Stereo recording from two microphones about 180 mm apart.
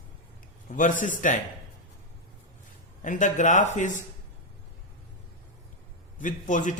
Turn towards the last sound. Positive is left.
turn(degrees=45)  # may be behind; listen again after turning